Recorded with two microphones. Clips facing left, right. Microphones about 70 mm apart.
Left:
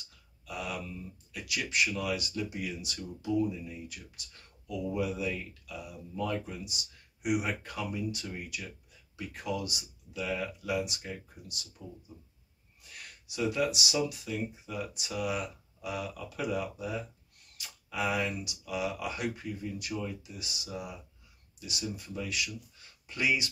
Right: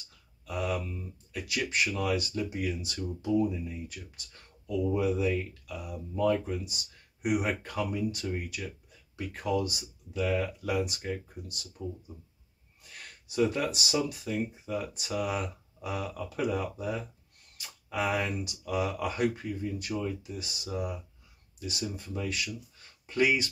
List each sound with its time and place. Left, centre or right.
0.5 s speech: right
4.6 s speech: right
12.9 s speech: right